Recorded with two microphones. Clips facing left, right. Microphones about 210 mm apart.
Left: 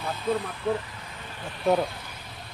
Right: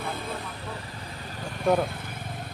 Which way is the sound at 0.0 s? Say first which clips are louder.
Even; 50° right (ahead or behind).